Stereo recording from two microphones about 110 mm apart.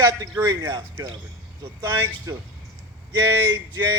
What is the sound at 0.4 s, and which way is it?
Speech, 35° right (ahead or behind).